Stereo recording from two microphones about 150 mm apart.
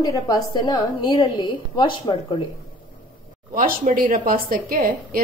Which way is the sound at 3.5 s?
65° right (ahead or behind).